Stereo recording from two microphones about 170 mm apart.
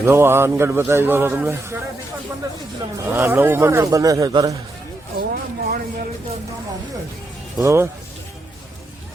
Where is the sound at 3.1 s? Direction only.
10° right (ahead or behind).